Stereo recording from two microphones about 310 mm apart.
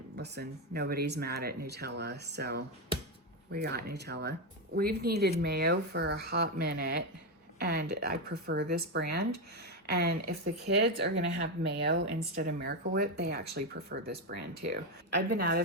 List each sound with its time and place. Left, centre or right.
0.2 s speech: right